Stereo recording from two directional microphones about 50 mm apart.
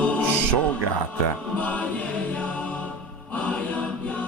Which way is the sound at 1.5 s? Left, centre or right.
Left.